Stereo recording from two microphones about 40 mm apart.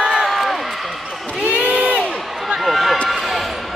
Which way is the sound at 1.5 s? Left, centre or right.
Right.